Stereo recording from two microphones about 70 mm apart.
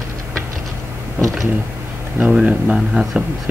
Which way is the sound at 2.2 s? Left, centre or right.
Centre.